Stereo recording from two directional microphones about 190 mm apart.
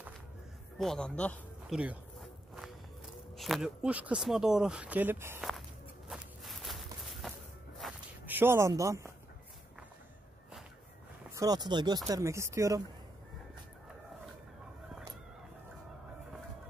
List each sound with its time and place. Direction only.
0.7 s speech: 5° left (ahead or behind)
1.8 s a sound: 5° right (ahead or behind)
3.3 s speech: centre (ahead or behind)
6.0 s walk: centre (ahead or behind); by 9.1 s 15° right (ahead or behind)
11.3 s speech: 20° right (ahead or behind)